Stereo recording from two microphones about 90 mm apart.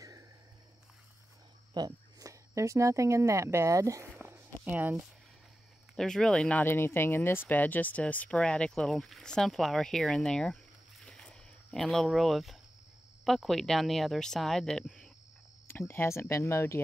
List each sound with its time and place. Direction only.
1.7 s speech: 50° right (ahead or behind)
4.2 s walk: 25° right (ahead or behind)
5.9 s speech: 5° left (ahead or behind)
6.6 s speech: 25° left (ahead or behind); by 15.0 s 5° left (ahead or behind)
15.9 s speech: 25° left (ahead or behind)